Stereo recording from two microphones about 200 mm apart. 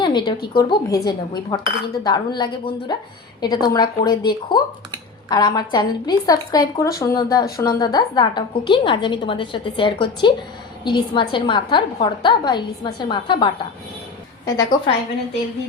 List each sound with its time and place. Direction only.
0.0 s a woman's voice: 20° left (ahead or behind)